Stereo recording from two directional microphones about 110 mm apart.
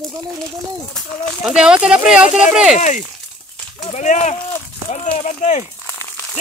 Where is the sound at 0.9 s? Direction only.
Centre (ahead or behind).